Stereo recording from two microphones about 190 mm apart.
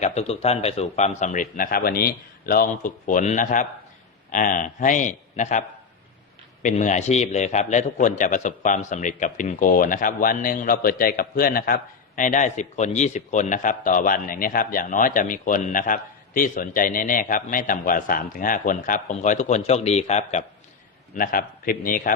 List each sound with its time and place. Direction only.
0.0 s a man's voice: 35° left (ahead or behind)
21.2 s a man's voice: 50° left (ahead or behind)